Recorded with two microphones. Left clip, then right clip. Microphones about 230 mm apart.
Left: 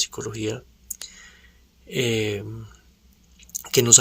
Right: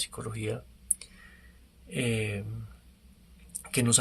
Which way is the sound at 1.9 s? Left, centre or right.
Left.